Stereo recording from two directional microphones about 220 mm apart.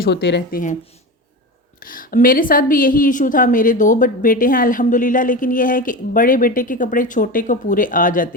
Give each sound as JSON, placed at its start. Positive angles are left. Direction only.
{"t": 0.0, "sound": "speech", "side_deg": 50}
{"t": 1.8, "sound": "a woman's voice", "side_deg": 40}